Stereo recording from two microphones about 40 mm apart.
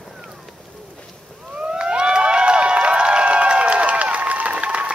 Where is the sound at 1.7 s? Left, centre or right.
Right.